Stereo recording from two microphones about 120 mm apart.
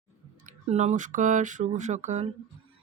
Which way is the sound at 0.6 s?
65° right (ahead or behind).